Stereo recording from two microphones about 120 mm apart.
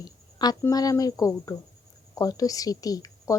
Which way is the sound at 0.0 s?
35° left (ahead or behind).